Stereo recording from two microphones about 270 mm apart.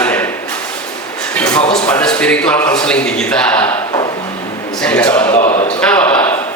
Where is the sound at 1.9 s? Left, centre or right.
Centre.